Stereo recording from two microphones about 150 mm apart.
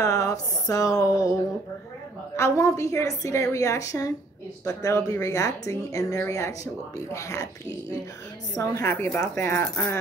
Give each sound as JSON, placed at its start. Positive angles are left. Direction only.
{"t": 0.0, "sound": "speech", "side_deg": 20}
{"t": 2.3, "sound": "speech", "side_deg": 20}
{"t": 8.5, "sound": "speech", "side_deg": 15}